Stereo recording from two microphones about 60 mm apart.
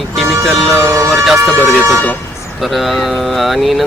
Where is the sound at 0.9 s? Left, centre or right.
Right.